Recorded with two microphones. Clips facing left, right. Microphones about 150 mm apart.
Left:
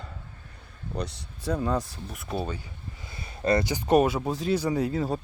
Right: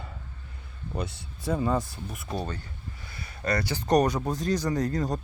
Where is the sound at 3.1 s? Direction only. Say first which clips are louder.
Left 5 dB; 25° left (ahead or behind).